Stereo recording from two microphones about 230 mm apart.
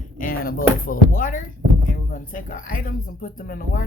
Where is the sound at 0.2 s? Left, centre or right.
Left.